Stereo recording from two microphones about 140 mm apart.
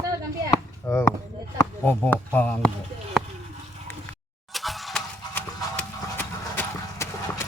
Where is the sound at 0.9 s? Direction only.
20° left (ahead or behind).